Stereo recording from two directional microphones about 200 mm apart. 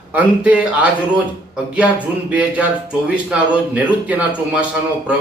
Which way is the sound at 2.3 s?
5° right (ahead or behind).